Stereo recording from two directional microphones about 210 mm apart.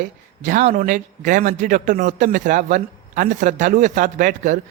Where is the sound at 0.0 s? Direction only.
40° right (ahead or behind).